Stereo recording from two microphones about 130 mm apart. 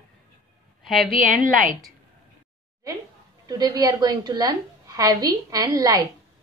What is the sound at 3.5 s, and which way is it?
A woman's voice, 30° right (ahead or behind).